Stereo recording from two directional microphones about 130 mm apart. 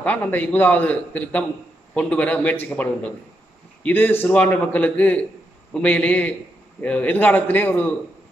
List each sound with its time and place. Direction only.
0.0 s a man's voice: 10° left (ahead or behind)